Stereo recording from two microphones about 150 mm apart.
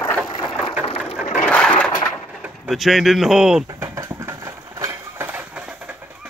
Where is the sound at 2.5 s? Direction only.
Centre (ahead or behind).